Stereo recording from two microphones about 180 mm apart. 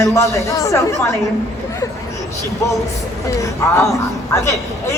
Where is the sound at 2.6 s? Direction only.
15° left (ahead or behind).